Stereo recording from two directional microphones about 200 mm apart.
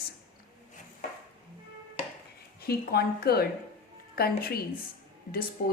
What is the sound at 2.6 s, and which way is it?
A woman's voice, 50° left (ahead or behind).